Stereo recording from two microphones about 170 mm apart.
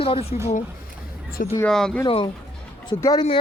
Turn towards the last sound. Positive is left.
turn(degrees=25)  # may be behind; listen again after turning